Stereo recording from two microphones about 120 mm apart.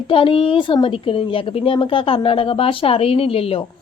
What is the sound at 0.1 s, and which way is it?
A woman's voice, 50° left (ahead or behind).